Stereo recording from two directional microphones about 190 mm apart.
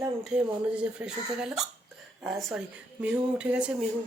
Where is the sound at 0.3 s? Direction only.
5° right (ahead or behind).